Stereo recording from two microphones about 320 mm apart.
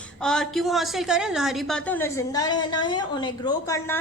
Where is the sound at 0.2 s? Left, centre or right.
Centre.